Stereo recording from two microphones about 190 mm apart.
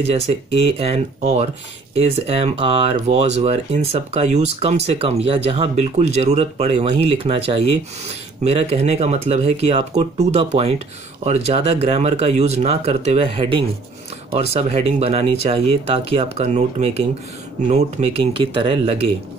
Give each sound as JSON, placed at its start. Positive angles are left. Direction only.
{"t": 0.7, "sound": "speech", "side_deg": -30}